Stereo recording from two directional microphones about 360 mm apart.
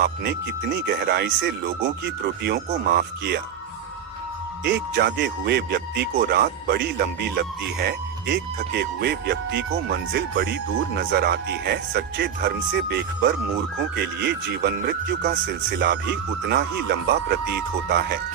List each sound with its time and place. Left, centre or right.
0.0 s speech: right
4.6 s speech: right